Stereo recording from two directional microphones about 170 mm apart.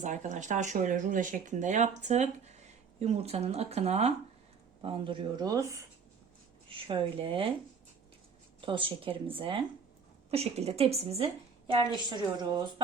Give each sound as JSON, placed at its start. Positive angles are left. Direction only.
{"t": 0.0, "sound": "speech", "side_deg": -45}
{"t": 6.7, "sound": "speech", "side_deg": -30}
{"t": 8.6, "sound": "speech", "side_deg": -30}
{"t": 11.7, "sound": "speech", "side_deg": -25}